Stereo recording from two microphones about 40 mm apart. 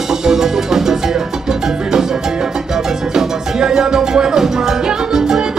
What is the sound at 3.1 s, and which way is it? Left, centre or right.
Music, centre.